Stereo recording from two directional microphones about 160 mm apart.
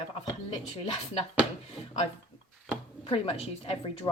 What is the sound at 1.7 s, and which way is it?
A woman's voice, 40° left (ahead or behind).